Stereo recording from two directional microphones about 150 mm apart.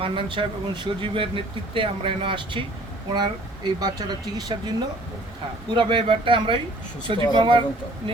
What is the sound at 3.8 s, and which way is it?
Speech, 30° right (ahead or behind).